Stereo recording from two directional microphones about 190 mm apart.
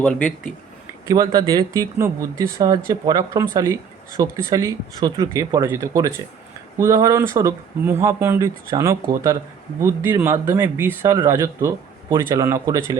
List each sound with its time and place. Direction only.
1.0 s speech: 20° right (ahead or behind)